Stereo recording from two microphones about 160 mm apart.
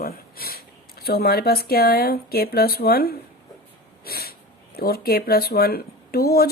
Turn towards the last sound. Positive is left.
turn(degrees=75)  # may be behind; listen again after turning